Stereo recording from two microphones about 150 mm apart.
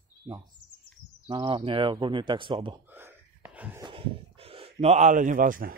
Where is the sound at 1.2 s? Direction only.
30° right (ahead or behind).